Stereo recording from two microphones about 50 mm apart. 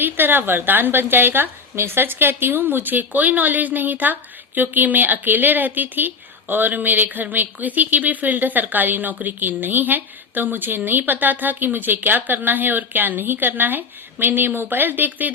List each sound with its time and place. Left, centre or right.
0.0 s a woman's voice: right